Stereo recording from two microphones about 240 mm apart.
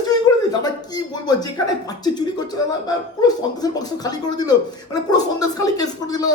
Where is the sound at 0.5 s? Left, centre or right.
Centre.